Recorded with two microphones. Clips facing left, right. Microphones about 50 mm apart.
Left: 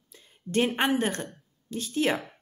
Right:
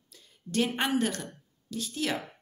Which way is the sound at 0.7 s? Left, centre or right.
Left.